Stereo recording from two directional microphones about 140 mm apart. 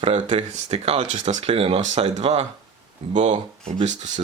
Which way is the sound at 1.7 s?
55° right (ahead or behind).